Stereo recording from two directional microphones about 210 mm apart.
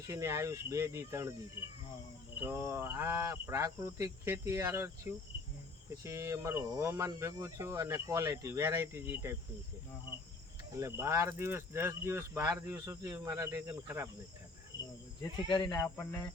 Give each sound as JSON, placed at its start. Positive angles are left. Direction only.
{"t": 0.0, "sound": "speech", "side_deg": -15}
{"t": 2.4, "sound": "speech", "side_deg": -10}
{"t": 10.8, "sound": "speech", "side_deg": -15}
{"t": 15.4, "sound": "speech", "side_deg": 20}